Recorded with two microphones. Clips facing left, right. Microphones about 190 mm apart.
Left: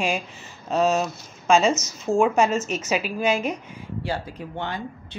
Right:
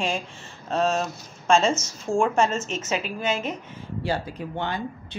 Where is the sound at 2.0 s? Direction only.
5° left (ahead or behind).